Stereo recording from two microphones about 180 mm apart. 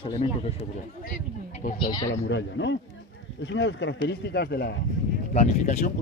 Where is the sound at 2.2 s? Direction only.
85° left; by 4.7 s 65° left (ahead or behind).